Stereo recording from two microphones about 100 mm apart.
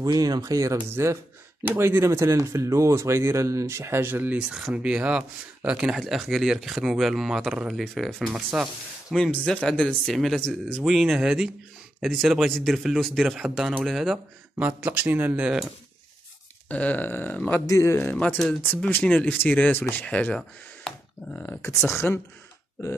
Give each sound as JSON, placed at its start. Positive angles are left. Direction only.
{"t": 0.0, "sound": "a man's voice", "side_deg": -40}
{"t": 14.6, "sound": "speech", "side_deg": -20}
{"t": 16.6, "sound": "speech", "side_deg": 15}
{"t": 17.6, "sound": "speech", "side_deg": 30}
{"t": 21.5, "sound": "speech", "side_deg": 25}